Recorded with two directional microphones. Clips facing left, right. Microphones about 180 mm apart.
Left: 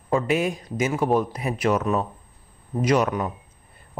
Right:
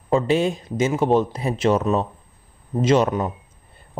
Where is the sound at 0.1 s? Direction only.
25° right (ahead or behind).